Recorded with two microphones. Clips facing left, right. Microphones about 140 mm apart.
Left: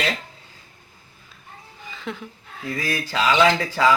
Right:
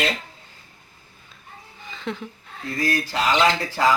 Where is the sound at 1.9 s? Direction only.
Centre (ahead or behind).